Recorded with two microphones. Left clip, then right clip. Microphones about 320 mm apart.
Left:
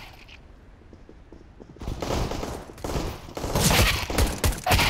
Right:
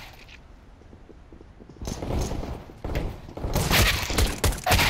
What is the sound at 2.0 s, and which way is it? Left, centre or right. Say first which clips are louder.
Fusillade: left 4 dB; left.